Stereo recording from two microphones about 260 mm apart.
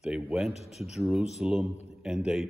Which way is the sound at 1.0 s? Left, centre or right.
Centre.